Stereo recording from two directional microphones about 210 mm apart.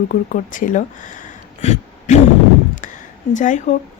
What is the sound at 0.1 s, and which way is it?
Speech, 40° left (ahead or behind).